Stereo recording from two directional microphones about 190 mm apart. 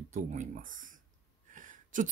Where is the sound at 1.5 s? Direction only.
45° right (ahead or behind).